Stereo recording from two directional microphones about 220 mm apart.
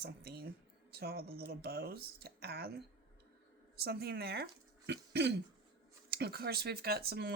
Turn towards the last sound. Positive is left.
turn(degrees=-45)  # may be behind; listen again after turning